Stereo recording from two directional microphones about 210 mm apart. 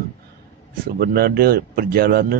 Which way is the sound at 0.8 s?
45° right (ahead or behind).